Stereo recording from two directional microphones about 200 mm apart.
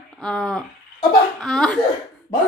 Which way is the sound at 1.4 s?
Centre (ahead or behind).